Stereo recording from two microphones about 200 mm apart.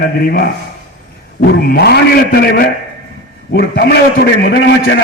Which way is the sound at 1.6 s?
55° left (ahead or behind).